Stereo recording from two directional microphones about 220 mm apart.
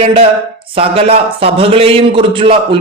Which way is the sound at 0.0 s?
25° right (ahead or behind).